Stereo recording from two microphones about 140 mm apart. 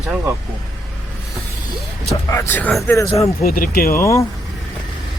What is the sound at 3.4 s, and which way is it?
Speech, 90° left.